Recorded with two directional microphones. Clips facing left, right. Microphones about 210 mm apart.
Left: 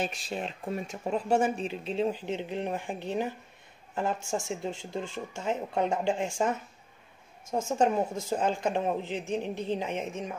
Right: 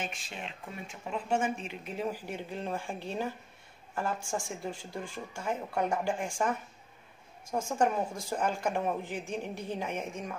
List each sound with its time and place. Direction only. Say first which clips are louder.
0.0 s speech: left 7 dB; 40° left (ahead or behind); by 6.5 s 25° left (ahead or behind)
7.5 s speech: left 3 dB; 20° left (ahead or behind)